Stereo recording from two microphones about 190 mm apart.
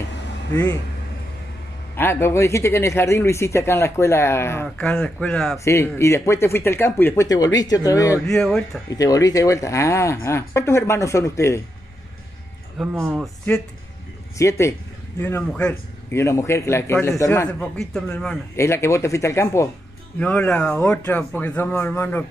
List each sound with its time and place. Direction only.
0.5 s speech: 10° left (ahead or behind)
2.0 s speech: 10° left (ahead or behind)
5.6 s speech: 15° left (ahead or behind)
8.4 s speech: centre (ahead or behind)
8.9 s speech: 20° left (ahead or behind)
12.7 s speech: 5° right (ahead or behind)
14.4 s speech: 15° left (ahead or behind)